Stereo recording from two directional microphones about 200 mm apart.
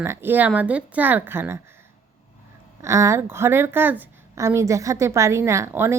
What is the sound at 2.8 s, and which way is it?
A woman's voice, 15° right (ahead or behind).